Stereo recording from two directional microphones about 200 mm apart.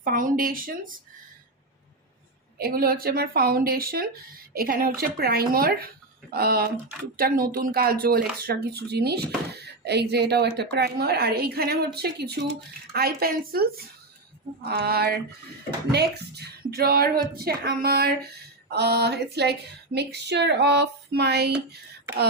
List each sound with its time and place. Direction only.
0.0 s speech: 40° right (ahead or behind)
2.6 s speech: 50° right (ahead or behind)